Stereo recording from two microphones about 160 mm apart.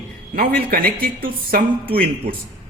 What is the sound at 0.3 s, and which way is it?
Speech, 70° right (ahead or behind).